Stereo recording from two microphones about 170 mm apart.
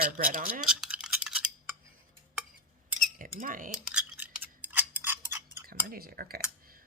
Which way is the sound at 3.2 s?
50° right (ahead or behind).